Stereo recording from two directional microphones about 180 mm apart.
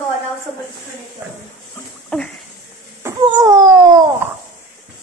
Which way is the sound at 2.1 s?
5° left (ahead or behind).